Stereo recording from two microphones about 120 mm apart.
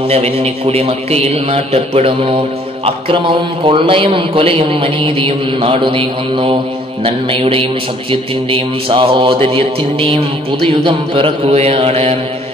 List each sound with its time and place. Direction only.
0.1 s a man's voice: 60° right (ahead or behind)
10.7 s mantra: 45° right (ahead or behind)